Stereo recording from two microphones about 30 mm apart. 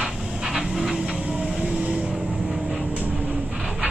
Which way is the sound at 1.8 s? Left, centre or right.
Right.